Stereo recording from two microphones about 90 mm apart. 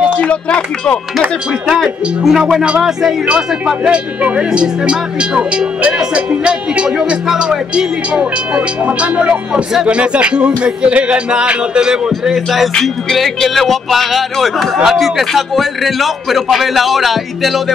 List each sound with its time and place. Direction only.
0.0 s speech: 10° left (ahead or behind)
1.7 s speech: 5° right (ahead or behind)